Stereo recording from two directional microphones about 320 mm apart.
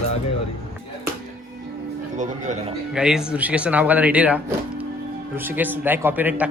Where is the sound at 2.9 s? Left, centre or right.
Centre.